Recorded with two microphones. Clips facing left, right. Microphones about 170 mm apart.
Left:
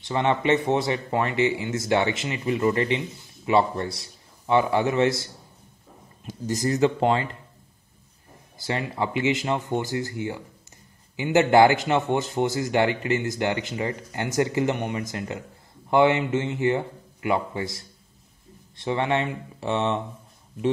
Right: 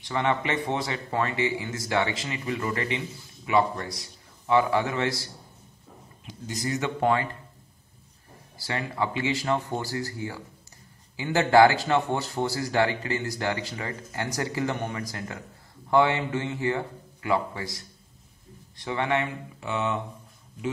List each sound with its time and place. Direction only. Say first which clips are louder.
0.0 s a man's voice: left 3 dB; 25° left (ahead or behind)
6.2 s a man's voice: left 6 dB; 40° left (ahead or behind)
7.0 s a man's voice: left 2 dB; 25° left (ahead or behind)
8.5 s a man's voice: left 2 dB; 20° left (ahead or behind)